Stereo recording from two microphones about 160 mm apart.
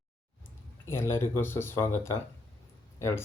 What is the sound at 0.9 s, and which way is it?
Speech, 15° left (ahead or behind).